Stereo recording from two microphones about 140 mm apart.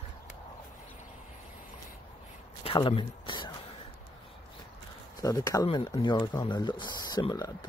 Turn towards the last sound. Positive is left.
turn(degrees=25)  # may be behind; listen again after turning